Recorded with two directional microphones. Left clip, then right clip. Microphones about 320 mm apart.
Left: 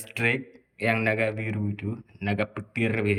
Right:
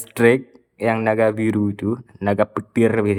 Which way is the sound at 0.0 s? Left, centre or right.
Centre.